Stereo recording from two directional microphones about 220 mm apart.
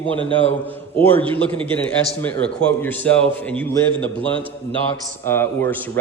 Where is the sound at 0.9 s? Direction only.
10° left (ahead or behind).